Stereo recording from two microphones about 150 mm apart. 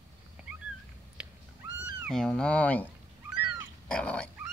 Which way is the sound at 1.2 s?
5° right (ahead or behind).